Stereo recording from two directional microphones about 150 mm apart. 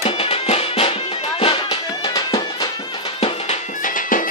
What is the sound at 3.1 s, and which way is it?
Music, 45° left (ahead or behind).